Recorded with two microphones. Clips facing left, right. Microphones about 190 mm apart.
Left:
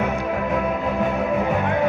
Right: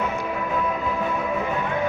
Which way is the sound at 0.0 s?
55° left (ahead or behind).